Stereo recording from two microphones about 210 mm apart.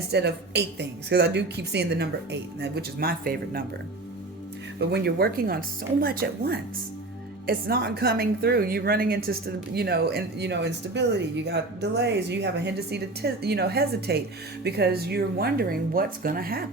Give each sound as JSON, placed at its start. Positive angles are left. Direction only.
{"t": 0.1, "sound": "a woman's voice", "side_deg": -55}
{"t": 4.8, "sound": "a woman's voice", "side_deg": -50}